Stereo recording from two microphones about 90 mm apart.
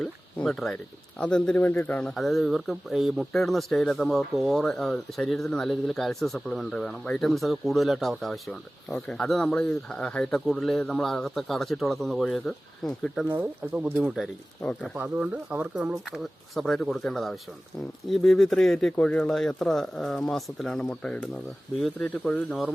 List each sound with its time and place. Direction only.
0.0 s a sound: 10° left (ahead or behind)
1.2 s a man's voice: 10° left (ahead or behind)
2.1 s speech: centre (ahead or behind)
14.6 s a man's voice: 15° left (ahead or behind)
14.9 s speech: 15° right (ahead or behind)
16.6 s speech: 5° left (ahead or behind)
20.8 s a man's voice: 15° left (ahead or behind)
21.8 s speech: 5° left (ahead or behind)
22.1 s a man's voice: 15° left (ahead or behind)